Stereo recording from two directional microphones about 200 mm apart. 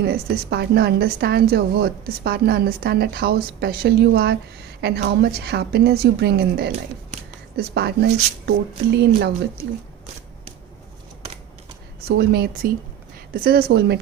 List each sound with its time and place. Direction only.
0.0 s a woman's voice: 55° right (ahead or behind)
6.7 s a sound: 35° right (ahead or behind)
7.5 s speech: 55° right (ahead or behind)
12.0 s a woman's voice: 50° right (ahead or behind)